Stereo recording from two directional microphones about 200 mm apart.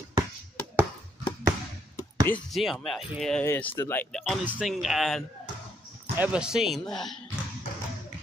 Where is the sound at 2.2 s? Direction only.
5° left (ahead or behind).